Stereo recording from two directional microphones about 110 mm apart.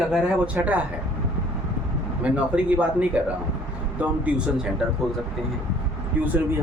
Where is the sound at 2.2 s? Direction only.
10° right (ahead or behind).